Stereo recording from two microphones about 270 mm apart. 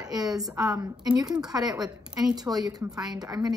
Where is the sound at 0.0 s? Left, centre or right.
Centre.